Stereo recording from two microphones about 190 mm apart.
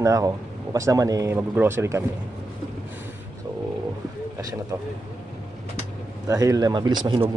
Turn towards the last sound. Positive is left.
turn(degrees=-20)  # may be behind; listen again after turning